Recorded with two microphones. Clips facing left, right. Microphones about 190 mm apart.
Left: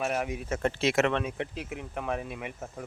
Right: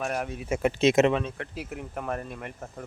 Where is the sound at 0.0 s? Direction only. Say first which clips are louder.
Left 1 dB; 5° left (ahead or behind).